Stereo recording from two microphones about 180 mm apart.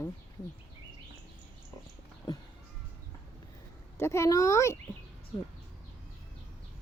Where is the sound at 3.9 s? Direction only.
15° left (ahead or behind).